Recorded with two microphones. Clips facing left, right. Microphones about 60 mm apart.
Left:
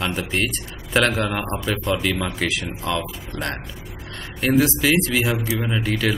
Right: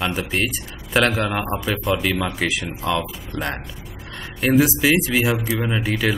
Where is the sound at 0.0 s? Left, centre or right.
Centre.